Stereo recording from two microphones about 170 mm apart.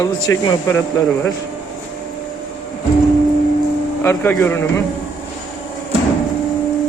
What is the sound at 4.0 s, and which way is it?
Speech, 15° left (ahead or behind).